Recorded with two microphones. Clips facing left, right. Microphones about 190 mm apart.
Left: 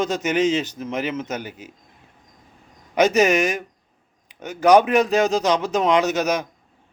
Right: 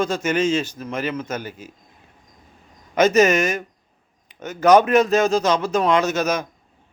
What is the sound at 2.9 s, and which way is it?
Speech, 15° left (ahead or behind).